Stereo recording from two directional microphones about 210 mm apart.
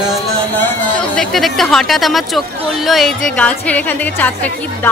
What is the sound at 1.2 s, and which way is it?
Speech, centre (ahead or behind).